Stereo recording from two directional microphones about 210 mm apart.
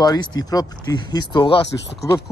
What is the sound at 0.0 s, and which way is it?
Speech, 20° left (ahead or behind).